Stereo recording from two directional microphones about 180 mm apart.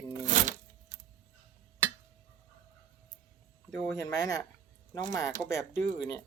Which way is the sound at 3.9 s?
20° left (ahead or behind).